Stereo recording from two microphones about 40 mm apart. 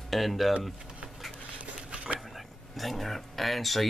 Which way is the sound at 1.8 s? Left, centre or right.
Right.